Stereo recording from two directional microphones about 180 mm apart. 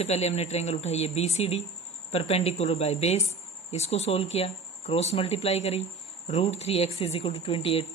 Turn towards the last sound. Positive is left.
turn(degrees=30)  # may be behind; listen again after turning